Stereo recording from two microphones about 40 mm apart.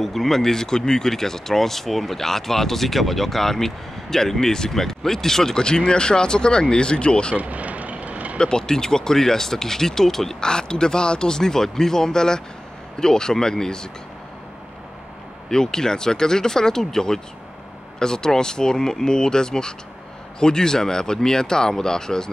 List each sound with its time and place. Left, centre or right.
0.0 s speech: centre; by 7.3 s left
7.3 s vehicle: right
8.4 s speech: centre
15.5 s speech: centre